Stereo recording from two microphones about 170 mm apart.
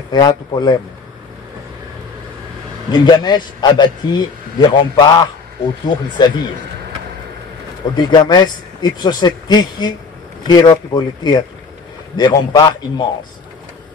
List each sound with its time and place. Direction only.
0.1 s a man's voice: 25° left (ahead or behind)
2.9 s a man's voice: 25° left (ahead or behind)
7.9 s a man's voice: 25° left (ahead or behind)